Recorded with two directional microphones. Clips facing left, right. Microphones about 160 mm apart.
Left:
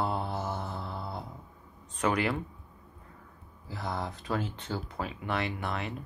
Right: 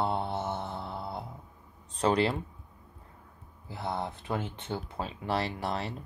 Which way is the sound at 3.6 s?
25° right (ahead or behind).